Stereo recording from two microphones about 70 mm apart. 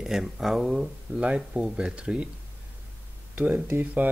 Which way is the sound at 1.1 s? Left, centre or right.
Centre.